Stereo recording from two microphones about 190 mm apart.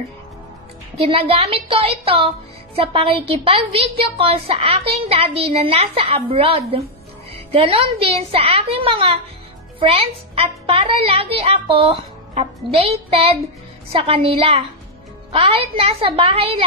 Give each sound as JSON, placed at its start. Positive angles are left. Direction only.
{"t": 0.9, "sound": "speech", "side_deg": -30}